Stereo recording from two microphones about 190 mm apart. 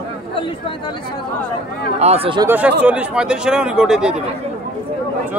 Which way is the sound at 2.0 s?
30° right (ahead or behind).